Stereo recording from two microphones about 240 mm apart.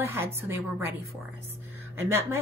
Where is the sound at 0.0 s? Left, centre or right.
Centre.